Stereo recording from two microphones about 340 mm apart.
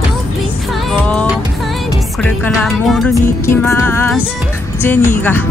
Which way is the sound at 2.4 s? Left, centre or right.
Centre.